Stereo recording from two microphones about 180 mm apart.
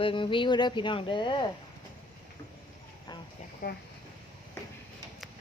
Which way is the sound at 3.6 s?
60° left (ahead or behind).